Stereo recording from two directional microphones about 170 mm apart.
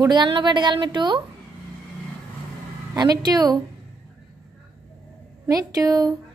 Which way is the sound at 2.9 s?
25° right (ahead or behind).